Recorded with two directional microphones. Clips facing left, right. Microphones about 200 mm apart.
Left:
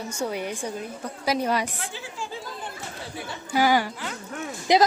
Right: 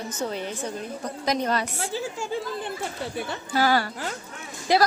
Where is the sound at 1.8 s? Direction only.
40° right (ahead or behind).